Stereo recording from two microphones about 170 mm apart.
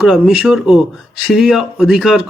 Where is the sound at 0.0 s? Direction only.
5° right (ahead or behind).